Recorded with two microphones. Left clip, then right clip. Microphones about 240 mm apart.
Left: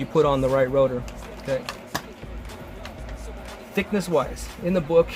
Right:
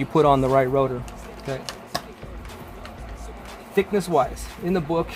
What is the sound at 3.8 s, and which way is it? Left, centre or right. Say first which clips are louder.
Speech: right 3 dB; right.